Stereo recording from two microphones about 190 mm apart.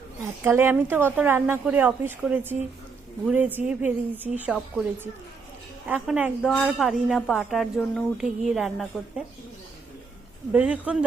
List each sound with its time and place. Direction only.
0.4 s a woman's voice: 10° right (ahead or behind)
5.9 s a woman's voice: 10° right (ahead or behind)
10.5 s a woman's voice: 5° right (ahead or behind)